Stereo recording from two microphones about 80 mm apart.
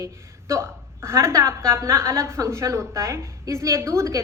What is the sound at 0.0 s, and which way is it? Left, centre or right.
A woman's voice, right.